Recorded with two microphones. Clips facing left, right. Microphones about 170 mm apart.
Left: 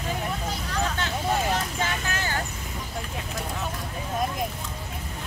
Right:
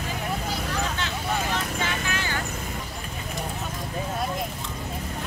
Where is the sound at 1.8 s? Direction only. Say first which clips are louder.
Even; 40° left (ahead or behind).